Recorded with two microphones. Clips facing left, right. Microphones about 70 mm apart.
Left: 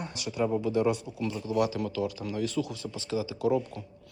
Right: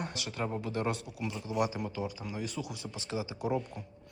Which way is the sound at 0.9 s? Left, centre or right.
Left.